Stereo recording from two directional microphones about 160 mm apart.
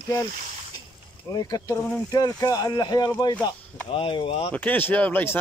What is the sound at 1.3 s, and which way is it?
Speech, 25° left (ahead or behind).